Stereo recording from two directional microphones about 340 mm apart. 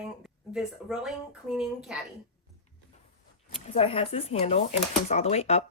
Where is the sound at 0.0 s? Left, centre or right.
Centre.